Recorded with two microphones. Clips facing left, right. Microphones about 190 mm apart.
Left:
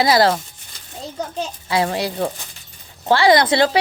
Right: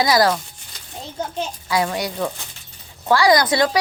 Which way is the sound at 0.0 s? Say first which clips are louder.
Left 2 dB; 25° left (ahead or behind).